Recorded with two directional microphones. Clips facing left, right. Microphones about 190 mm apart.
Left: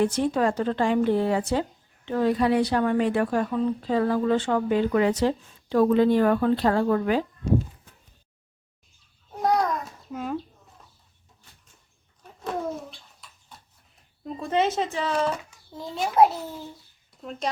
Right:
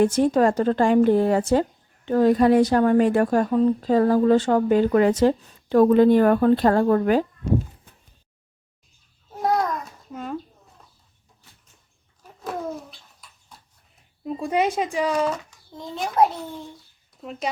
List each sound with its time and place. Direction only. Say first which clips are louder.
0.0 s speech: right 5 dB; 45° right (ahead or behind)
9.3 s a sound: even; centre (ahead or behind)
14.3 s speech: right 2 dB; 10° right (ahead or behind)
15.7 s a child's voice: left 1 dB; centre (ahead or behind)